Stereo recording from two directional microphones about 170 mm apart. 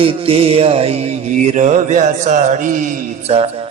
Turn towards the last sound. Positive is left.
turn(degrees=-40)  # may be behind; listen again after turning